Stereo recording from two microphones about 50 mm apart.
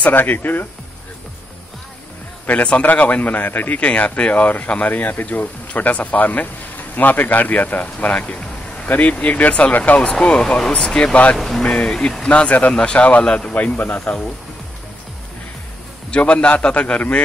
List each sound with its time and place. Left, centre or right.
0.0 s speech: left
2.4 s speech: left
10.4 s speech: centre
11.3 s speech: centre
11.6 s a man's voice: left
13.7 s a man's voice: left
16.1 s a man's voice: left